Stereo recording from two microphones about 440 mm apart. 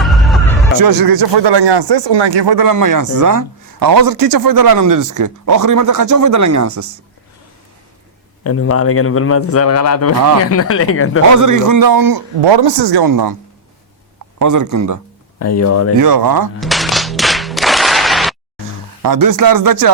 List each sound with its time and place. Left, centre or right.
0.0 s a sound: centre
0.8 s speech: right
8.4 s a man's voice: left
11.3 s speech: right
12.4 s speech: right
14.3 s speech: right
15.4 s a man's voice: left
16.0 s speech: right
16.6 s clapping: centre
19.0 s speech: right